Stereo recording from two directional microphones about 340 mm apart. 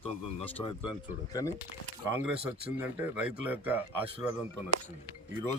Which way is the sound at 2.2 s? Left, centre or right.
Centre.